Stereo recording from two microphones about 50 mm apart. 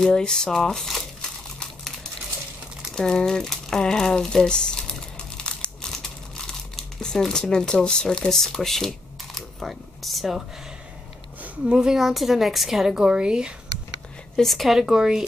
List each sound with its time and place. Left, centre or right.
0.0 s speech: centre
2.9 s speech: centre
5.4 s crumpling: centre
11.7 s speech: centre
14.3 s speech: centre